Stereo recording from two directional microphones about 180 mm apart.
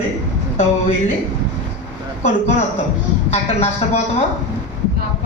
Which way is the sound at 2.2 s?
40° left (ahead or behind).